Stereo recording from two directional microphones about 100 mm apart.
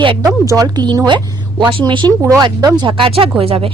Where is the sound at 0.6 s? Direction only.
40° right (ahead or behind).